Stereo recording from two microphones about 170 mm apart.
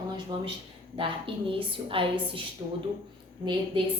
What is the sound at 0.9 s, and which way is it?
A woman's voice, 30° right (ahead or behind).